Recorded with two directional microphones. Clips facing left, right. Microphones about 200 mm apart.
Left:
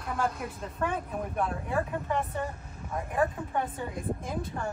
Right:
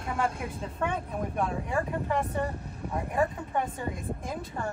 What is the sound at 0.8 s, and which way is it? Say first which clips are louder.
Speech: even; centre (ahead or behind).